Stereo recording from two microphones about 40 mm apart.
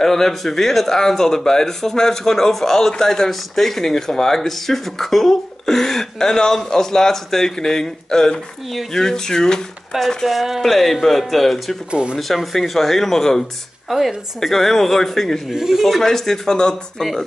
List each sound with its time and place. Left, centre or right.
0.0 s speech: centre
9.9 s speech: centre
11.9 s speech: right
12.2 s speech: centre
15.5 s speech: centre
15.8 s speech: centre